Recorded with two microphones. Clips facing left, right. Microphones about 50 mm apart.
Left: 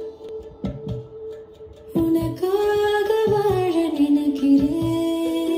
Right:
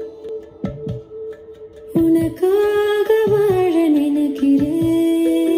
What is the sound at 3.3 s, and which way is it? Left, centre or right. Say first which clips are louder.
Music: right 5 dB; right.